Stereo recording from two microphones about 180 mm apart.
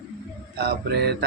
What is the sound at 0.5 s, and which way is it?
Speech, 65° right (ahead or behind).